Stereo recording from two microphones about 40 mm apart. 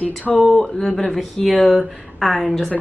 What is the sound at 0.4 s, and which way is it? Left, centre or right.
Speech, centre.